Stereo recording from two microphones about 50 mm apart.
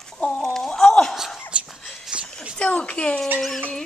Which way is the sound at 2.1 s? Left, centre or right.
Right.